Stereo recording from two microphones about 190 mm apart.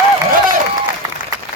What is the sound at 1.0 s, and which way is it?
Applause, 20° right (ahead or behind).